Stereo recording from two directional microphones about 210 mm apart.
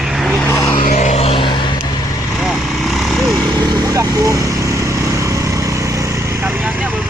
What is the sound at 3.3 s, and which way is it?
Vehicle, 15° right (ahead or behind).